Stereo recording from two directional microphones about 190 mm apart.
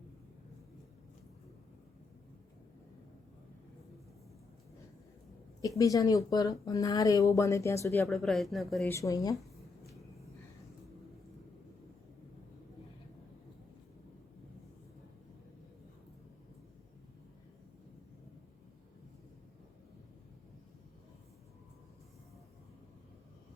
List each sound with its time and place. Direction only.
5.6 s speech: 15° left (ahead or behind)
8.1 s speech: centre (ahead or behind)
8.9 s speech: 15° left (ahead or behind)